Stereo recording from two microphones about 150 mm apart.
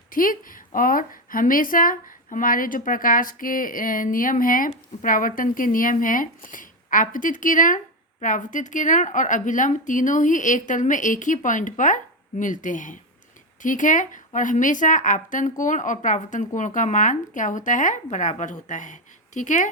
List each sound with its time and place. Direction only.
0.1 s a woman's voice: 65° left (ahead or behind)